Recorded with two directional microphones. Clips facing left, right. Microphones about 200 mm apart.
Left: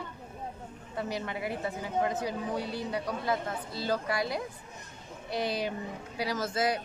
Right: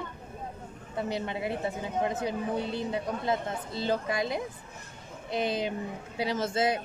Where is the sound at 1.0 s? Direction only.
25° right (ahead or behind).